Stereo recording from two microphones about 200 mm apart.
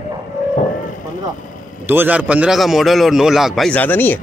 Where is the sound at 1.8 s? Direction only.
10° right (ahead or behind); by 4.2 s 10° left (ahead or behind).